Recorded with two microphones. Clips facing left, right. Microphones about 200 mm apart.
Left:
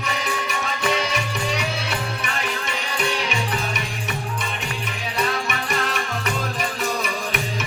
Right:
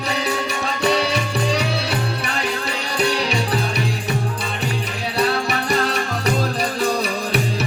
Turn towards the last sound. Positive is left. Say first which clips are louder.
# right 5 dB
turn(degrees=-35)  # may be behind; listen again after turning